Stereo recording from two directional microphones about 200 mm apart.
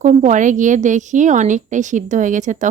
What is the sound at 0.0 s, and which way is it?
Speech, 40° right (ahead or behind).